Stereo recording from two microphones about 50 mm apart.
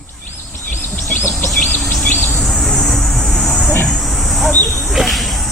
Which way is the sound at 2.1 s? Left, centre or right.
Left.